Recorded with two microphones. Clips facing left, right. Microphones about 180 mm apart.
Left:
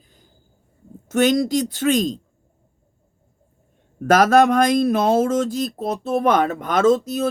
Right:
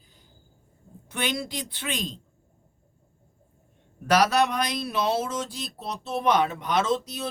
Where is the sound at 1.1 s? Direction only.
45° left (ahead or behind).